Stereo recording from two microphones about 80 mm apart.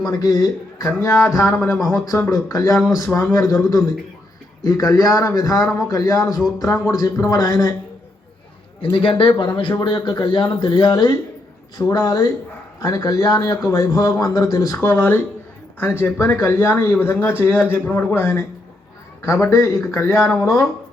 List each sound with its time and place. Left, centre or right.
0.0 s a man's voice: left
0.9 s speech: left
1.8 s speech: left
2.1 s speech: left
2.5 s a man's voice: left
8.8 s a man's voice: left
9.7 s a man's voice: left
11.9 s a man's voice: left
14.8 s speech: left